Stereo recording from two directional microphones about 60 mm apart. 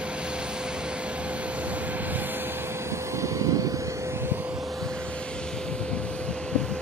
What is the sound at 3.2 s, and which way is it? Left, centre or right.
Vehicle, right.